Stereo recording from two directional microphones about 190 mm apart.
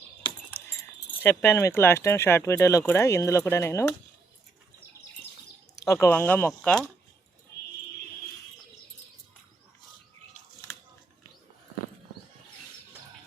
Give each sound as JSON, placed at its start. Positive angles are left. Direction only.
{"t": 1.2, "sound": "speech", "side_deg": 10}
{"t": 5.8, "sound": "speech", "side_deg": 15}